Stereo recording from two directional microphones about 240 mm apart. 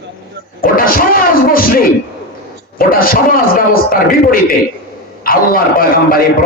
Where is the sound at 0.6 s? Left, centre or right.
Left.